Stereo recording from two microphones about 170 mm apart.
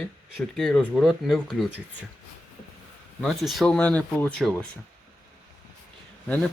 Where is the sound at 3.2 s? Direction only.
Centre (ahead or behind).